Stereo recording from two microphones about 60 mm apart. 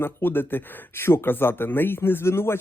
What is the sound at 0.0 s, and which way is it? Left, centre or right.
Speech, left.